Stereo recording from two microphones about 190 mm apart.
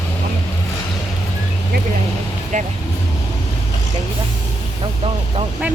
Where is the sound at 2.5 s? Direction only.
40° right (ahead or behind).